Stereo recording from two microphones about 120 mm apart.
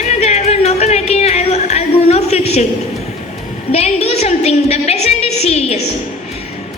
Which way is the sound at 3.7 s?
60° left (ahead or behind).